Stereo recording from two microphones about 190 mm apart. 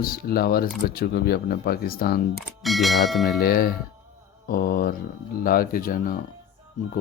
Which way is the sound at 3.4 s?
50° left (ahead or behind).